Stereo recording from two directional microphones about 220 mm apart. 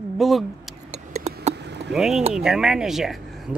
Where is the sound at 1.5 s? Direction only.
50° right (ahead or behind).